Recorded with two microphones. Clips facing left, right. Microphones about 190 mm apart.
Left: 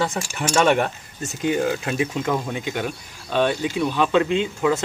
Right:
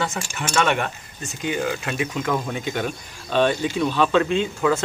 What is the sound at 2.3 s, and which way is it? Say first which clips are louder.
Speech: even; 15° left (ahead or behind).